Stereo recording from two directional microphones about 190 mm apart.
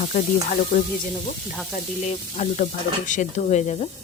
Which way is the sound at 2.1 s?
35° left (ahead or behind).